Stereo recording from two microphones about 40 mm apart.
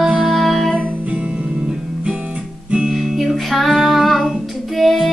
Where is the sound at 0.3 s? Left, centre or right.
Centre.